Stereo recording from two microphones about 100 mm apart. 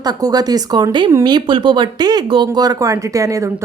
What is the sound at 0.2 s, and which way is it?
Speech, 40° right (ahead or behind).